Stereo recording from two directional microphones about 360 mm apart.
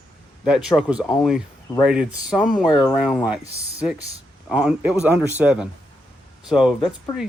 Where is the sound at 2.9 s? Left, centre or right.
Centre.